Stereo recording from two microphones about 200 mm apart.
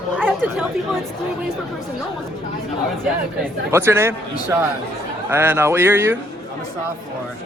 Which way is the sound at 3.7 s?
10° right (ahead or behind).